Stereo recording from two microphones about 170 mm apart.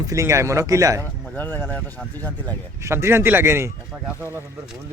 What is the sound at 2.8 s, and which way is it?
Speech, 15° right (ahead or behind).